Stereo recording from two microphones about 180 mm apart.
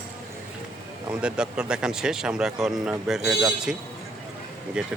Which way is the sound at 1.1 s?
5° right (ahead or behind).